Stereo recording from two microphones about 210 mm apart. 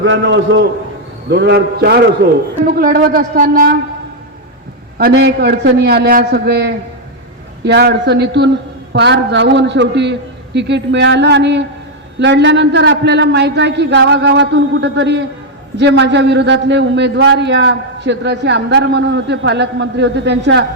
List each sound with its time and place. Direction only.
0.0 s a man's voice: 65° right (ahead or behind); by 3.8 s 40° right (ahead or behind)
4.9 s a man's voice: 50° right (ahead or behind)